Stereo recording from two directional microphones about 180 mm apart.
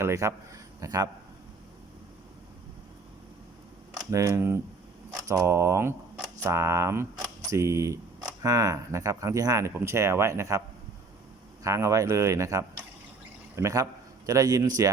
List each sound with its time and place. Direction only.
0.0 s speech: 15° right (ahead or behind)
4.1 s speech: 15° right (ahead or behind)
11.6 s speech: 15° right (ahead or behind)